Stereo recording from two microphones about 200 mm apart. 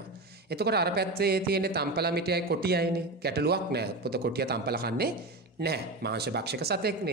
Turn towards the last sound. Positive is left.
turn(degrees=-55)  # may be behind; listen again after turning